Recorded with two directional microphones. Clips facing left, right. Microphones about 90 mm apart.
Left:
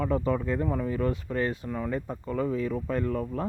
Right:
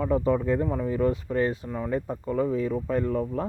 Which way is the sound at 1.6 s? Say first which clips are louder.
Right 2 dB; 20° right (ahead or behind).